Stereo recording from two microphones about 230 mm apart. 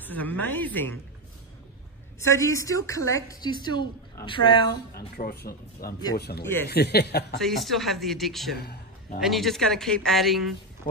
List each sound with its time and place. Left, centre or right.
0.0 s a woman's voice: centre
2.2 s a woman's voice: centre
5.1 s speech: left
6.4 s a woman's voice: centre
6.7 s speech: left
7.3 s a woman's voice: centre
8.5 s a sound: left
9.2 s a woman's voice: centre